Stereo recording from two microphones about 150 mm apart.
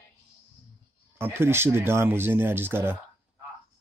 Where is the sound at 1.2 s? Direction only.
15° right (ahead or behind).